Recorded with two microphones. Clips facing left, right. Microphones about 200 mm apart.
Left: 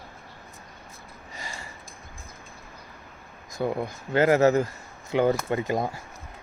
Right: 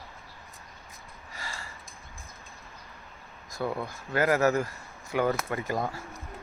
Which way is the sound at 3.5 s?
20° left (ahead or behind).